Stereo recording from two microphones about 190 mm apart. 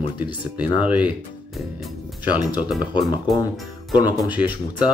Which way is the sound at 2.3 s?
5° right (ahead or behind).